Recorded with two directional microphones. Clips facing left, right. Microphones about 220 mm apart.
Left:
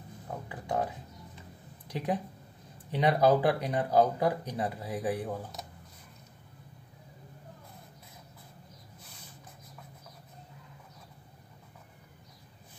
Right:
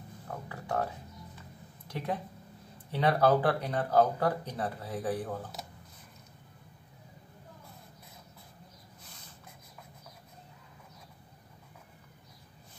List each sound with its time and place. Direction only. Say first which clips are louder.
0.5 s music: left 1 dB; 15° left (ahead or behind)
1.9 s speech: left 3 dB; 15° left (ahead or behind)